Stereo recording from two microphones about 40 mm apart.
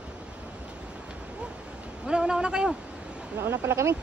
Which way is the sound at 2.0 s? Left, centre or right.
Centre.